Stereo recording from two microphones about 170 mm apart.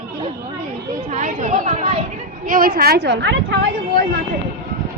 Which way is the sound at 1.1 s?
45° right (ahead or behind).